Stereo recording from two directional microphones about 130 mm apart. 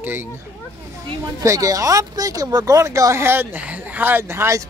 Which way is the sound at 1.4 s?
25° right (ahead or behind).